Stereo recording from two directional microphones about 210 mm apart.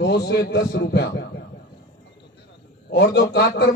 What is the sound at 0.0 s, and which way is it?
Speech, 50° left (ahead or behind).